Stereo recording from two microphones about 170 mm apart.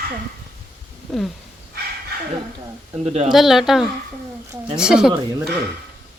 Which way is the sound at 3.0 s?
40° right (ahead or behind).